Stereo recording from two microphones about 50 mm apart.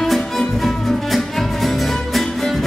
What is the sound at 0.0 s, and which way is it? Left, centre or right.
Music, centre.